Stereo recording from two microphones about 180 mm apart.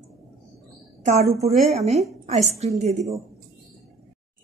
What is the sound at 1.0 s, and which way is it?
A woman's voice, 40° right (ahead or behind).